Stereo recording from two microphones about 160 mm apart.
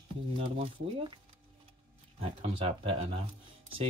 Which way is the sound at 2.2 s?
35° right (ahead or behind).